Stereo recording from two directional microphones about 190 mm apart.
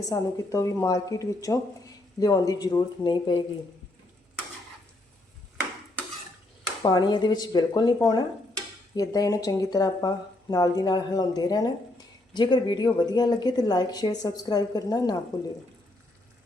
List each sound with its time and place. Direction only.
0.1 s speech: 15° left (ahead or behind)
6.8 s speech: 20° left (ahead or behind)